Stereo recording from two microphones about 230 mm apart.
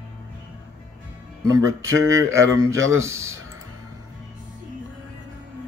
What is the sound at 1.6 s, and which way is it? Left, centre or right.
Speech, right.